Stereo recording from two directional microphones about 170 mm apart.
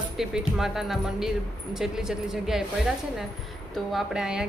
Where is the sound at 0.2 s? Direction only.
5° right (ahead or behind).